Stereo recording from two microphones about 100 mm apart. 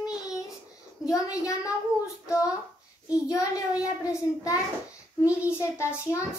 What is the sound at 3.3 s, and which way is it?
Child singing, 35° left (ahead or behind).